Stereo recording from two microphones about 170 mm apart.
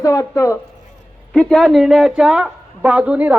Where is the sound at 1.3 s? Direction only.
5° left (ahead or behind).